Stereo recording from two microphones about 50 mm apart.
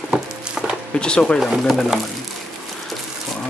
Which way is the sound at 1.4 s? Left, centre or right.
Centre.